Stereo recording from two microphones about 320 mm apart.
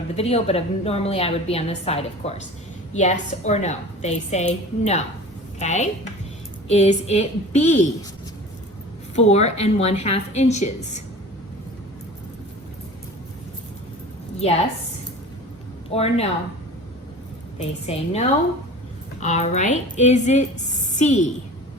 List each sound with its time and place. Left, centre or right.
0.2 s a woman's voice: centre
9.1 s a woman's voice: centre
14.3 s a woman's voice: centre
15.9 s a woman's voice: centre
17.6 s a woman's voice: centre